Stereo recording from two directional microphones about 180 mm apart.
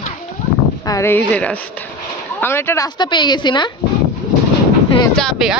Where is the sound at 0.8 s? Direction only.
15° left (ahead or behind).